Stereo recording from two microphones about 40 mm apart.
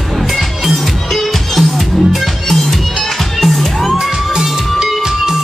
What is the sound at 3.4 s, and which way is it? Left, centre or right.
Music, centre.